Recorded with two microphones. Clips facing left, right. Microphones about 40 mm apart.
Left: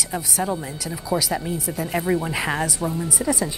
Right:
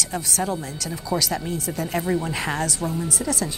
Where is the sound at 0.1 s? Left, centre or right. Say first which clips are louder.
Left 2 dB; centre.